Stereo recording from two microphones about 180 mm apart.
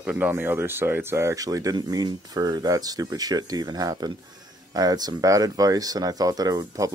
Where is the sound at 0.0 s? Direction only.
10° right (ahead or behind).